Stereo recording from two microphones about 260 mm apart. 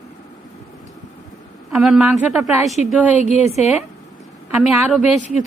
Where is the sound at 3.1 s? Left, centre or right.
Left.